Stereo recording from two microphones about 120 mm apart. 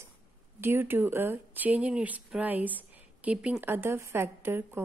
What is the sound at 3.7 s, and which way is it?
Speech, 20° right (ahead or behind).